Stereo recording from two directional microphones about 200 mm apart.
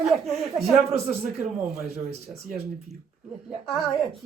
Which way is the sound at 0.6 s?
30° right (ahead or behind).